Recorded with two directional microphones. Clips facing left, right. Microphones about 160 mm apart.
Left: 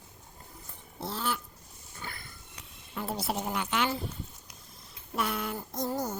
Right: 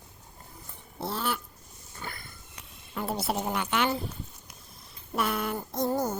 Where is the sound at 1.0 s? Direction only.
60° right (ahead or behind).